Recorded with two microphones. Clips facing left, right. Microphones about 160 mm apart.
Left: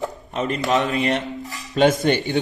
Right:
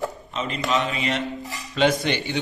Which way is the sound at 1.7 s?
45° left (ahead or behind).